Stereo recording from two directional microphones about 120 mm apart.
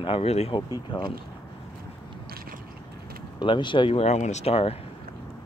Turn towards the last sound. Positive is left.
turn(degrees=55)  # may be behind; listen again after turning